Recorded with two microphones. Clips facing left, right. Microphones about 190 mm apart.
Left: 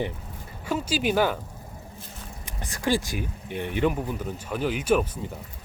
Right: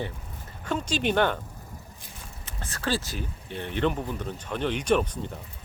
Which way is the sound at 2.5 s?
15° left (ahead or behind).